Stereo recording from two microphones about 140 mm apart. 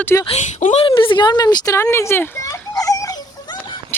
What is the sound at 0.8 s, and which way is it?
A child's voice, 35° left (ahead or behind).